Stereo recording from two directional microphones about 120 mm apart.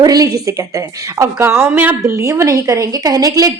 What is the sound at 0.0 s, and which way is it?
A woman's voice, 30° right (ahead or behind).